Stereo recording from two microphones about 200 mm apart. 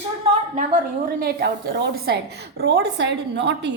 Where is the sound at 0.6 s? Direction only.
45° right (ahead or behind).